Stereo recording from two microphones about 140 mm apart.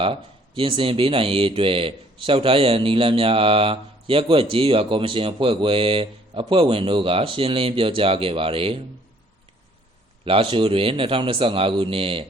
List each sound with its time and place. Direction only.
0.0 s speech: 40° right (ahead or behind)
10.2 s speech: 40° right (ahead or behind)